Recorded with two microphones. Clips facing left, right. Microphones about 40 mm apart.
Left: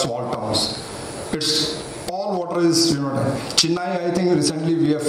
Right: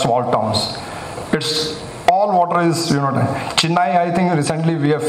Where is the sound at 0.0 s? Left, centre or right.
Right.